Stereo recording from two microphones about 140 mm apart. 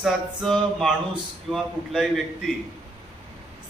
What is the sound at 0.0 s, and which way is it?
A man's voice, centre (ahead or behind).